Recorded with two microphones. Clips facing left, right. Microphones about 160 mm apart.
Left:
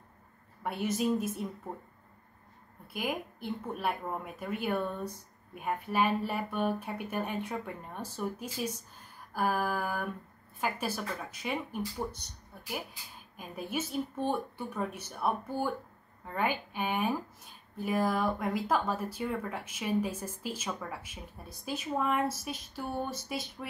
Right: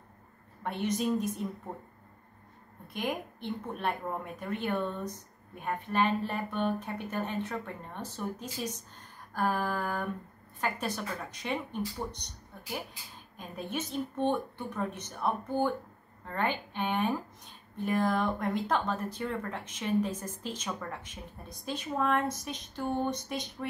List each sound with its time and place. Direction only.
0.7 s a woman's voice: 5° left (ahead or behind)
2.9 s speech: 5° left (ahead or behind)